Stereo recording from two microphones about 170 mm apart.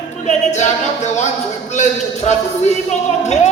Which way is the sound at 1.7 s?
45° left (ahead or behind).